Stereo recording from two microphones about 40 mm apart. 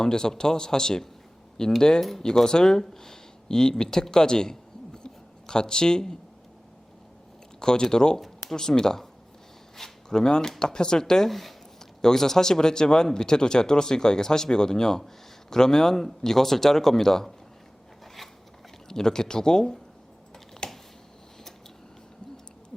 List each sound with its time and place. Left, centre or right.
0.0 s speech: centre
2.0 s speech: centre
5.0 s a sound: centre
7.6 s speech: centre
11.3 s speech: centre
18.0 s zipper: centre
18.9 s speech: centre
20.6 s a sound: centre